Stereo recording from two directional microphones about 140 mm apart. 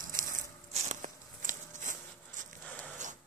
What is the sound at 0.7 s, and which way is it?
Walk, 60° right (ahead or behind).